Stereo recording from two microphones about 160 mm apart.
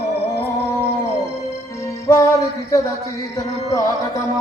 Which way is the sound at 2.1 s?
15° left (ahead or behind).